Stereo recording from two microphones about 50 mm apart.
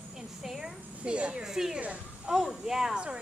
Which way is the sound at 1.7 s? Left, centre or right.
Right.